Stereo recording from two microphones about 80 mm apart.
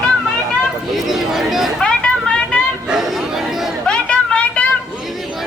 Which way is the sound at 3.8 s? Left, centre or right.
Centre.